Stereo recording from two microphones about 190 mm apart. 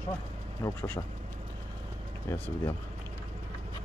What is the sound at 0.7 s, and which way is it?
Speech, 10° left (ahead or behind).